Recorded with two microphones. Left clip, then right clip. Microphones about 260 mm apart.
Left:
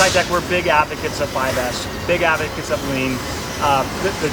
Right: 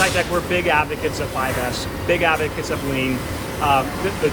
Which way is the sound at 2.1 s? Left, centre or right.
Centre.